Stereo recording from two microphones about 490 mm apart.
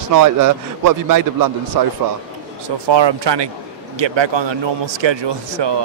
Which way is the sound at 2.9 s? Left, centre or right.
Right.